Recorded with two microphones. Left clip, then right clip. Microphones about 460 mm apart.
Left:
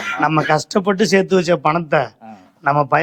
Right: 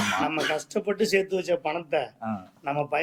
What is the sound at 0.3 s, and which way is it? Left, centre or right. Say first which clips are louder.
A man's voice: left 11 dB; left.